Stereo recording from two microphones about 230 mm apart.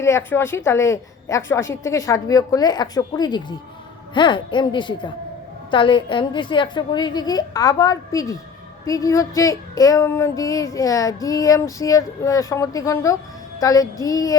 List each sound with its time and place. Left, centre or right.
0.0 s child singing: centre
4.1 s speech: centre
5.7 s child singing: left